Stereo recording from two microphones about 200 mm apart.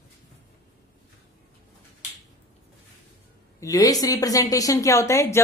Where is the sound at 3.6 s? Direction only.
15° left (ahead or behind).